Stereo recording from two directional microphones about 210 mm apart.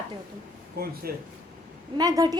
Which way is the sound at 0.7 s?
45° right (ahead or behind).